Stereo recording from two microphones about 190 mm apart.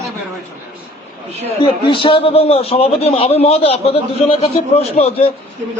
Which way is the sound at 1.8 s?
30° left (ahead or behind).